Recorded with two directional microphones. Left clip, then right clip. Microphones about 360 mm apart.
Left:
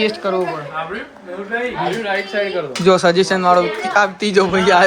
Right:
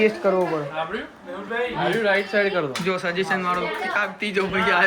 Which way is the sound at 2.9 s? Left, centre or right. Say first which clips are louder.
Left 11 dB; centre.